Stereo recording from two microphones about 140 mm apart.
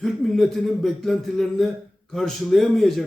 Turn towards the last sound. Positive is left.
turn(degrees=5)  # may be behind; listen again after turning